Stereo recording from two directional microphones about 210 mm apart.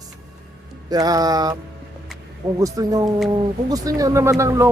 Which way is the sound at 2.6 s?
15° right (ahead or behind).